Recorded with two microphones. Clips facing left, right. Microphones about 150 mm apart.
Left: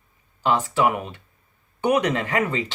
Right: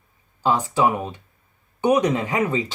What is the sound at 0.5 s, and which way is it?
Speech, 20° right (ahead or behind).